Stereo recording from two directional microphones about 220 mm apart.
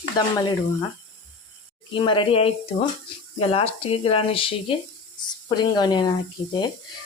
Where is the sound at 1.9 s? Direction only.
20° left (ahead or behind).